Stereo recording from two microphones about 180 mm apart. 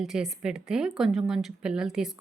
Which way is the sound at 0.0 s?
5° right (ahead or behind).